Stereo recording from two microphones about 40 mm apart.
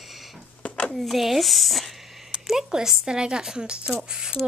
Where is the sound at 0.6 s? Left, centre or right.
Left.